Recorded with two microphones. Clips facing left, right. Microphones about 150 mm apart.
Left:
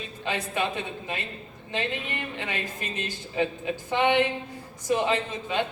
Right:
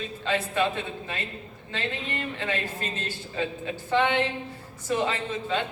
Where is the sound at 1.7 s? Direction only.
15° left (ahead or behind).